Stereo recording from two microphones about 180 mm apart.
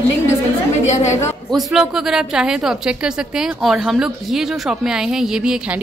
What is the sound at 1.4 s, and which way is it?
A woman's voice, centre (ahead or behind).